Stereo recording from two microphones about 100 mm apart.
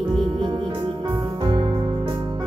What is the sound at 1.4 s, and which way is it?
Music, 60° right (ahead or behind).